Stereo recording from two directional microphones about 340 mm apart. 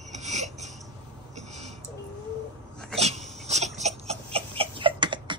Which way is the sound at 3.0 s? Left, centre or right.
Centre.